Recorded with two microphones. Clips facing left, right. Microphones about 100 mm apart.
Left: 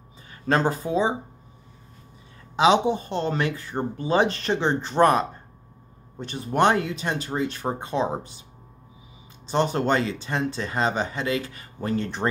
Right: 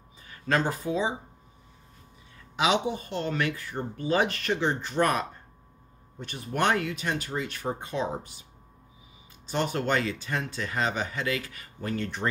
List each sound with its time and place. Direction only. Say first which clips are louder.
0.3 s speech: left 4 dB; 30° left (ahead or behind)
2.5 s speech: left 7 dB; 30° left (ahead or behind)
9.5 s speech: left 5 dB; 30° left (ahead or behind)